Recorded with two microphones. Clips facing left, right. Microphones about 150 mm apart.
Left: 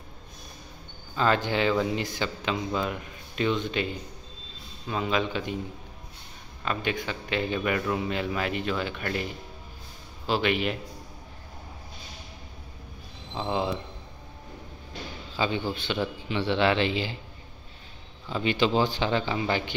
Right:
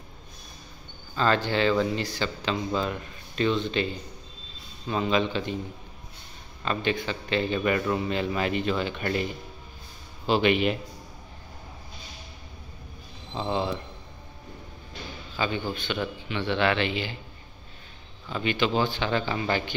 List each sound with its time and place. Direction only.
1.1 s speech: 15° left (ahead or behind)
6.6 s speech: 10° left (ahead or behind)
13.3 s speech: 10° left (ahead or behind)
15.3 s speech: 25° left (ahead or behind)
18.3 s speech: 25° left (ahead or behind)
19.0 s speech: 15° left (ahead or behind)